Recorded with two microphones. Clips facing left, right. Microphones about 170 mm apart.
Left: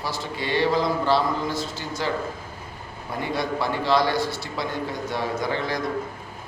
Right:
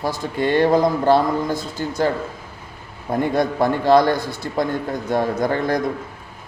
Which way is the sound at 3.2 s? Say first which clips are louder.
Right 7 dB; 50° right (ahead or behind).